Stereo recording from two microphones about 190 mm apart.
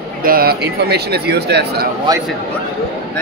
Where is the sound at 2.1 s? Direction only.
20° right (ahead or behind).